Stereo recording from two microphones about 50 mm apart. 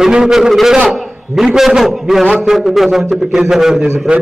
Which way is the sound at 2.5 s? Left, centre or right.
Centre.